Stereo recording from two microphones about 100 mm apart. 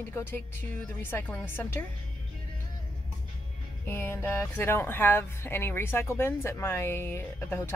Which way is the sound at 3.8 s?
25° left (ahead or behind).